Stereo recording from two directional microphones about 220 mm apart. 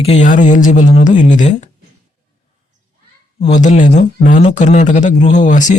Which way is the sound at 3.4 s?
35° left (ahead or behind).